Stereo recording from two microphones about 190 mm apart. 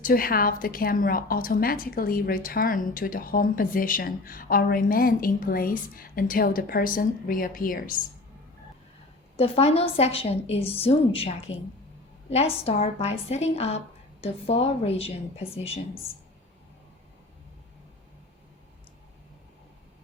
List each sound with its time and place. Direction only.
0.0 s a woman's voice: 50° left (ahead or behind)
9.3 s a woman's voice: 30° left (ahead or behind)